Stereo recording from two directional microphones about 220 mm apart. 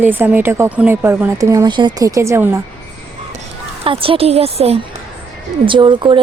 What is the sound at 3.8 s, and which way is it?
Speech, 25° right (ahead or behind).